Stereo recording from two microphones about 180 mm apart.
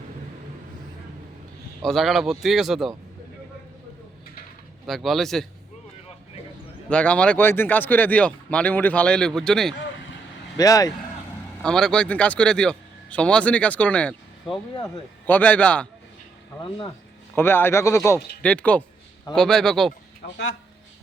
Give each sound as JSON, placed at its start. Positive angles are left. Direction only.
{"t": 1.8, "sound": "speech", "side_deg": 0}
{"t": 4.9, "sound": "speech", "side_deg": 0}
{"t": 6.9, "sound": "a man's voice", "side_deg": 5}
{"t": 10.6, "sound": "speech", "side_deg": 20}
{"t": 11.6, "sound": "a man's voice", "side_deg": 5}
{"t": 17.3, "sound": "a man's voice", "side_deg": 10}